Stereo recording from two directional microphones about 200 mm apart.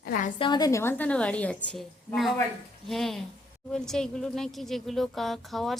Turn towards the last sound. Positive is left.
turn(degrees=0)  # may be behind; listen again after turning